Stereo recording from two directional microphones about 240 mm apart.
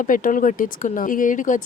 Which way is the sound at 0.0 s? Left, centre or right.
Left.